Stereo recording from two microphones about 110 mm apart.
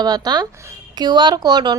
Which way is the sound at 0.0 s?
40° right (ahead or behind).